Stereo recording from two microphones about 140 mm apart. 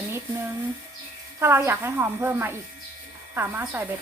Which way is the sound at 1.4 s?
15° right (ahead or behind).